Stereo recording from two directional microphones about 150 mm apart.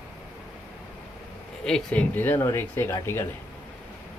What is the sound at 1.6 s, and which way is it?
Speech, 5° left (ahead or behind).